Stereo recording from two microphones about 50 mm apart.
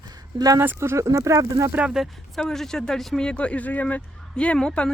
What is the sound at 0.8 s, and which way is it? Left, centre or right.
Speech, right.